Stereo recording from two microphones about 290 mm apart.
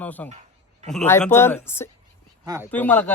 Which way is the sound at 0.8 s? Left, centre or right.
Centre.